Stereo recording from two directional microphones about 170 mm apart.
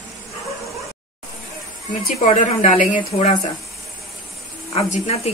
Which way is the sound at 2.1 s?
40° left (ahead or behind).